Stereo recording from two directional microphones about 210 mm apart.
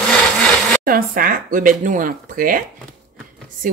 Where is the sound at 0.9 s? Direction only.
45° right (ahead or behind).